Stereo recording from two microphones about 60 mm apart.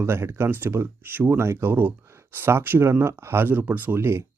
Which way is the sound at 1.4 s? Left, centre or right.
Right.